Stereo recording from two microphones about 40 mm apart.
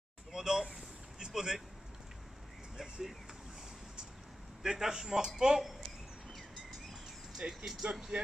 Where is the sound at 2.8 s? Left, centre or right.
Centre.